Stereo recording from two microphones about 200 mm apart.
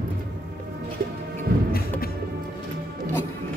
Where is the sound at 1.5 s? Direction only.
50° right (ahead or behind).